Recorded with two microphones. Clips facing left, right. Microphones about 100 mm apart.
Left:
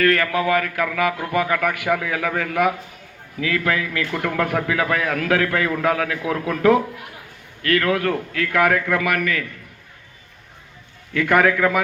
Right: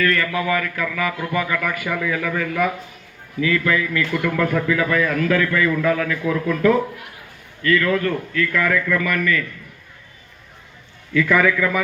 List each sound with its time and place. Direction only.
0.0 s a man's voice: 65° left (ahead or behind)
11.1 s a man's voice: 65° left (ahead or behind)